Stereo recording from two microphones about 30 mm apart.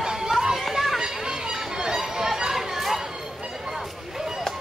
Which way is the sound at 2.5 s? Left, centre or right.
Centre.